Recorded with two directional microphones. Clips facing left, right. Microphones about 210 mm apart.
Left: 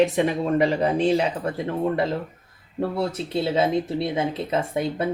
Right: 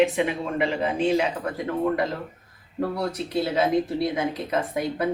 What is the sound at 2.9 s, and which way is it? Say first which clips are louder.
Speech: left 2 dB; 25° left (ahead or behind).